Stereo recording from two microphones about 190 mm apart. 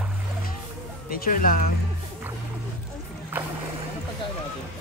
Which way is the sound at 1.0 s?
50° left (ahead or behind).